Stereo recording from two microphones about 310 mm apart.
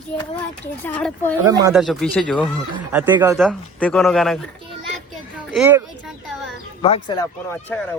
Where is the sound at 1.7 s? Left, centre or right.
Centre.